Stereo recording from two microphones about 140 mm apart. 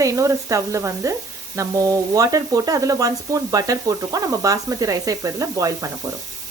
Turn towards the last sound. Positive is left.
turn(degrees=-25)  # may be behind; listen again after turning